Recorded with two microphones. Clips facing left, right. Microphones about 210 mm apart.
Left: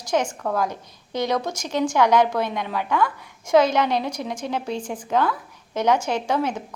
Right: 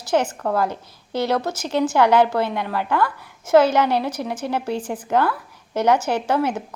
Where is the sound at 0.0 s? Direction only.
5° right (ahead or behind).